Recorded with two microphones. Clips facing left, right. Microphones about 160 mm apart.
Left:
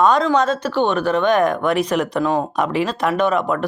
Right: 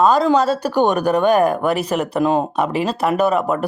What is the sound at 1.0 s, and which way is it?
Speech, 40° right (ahead or behind).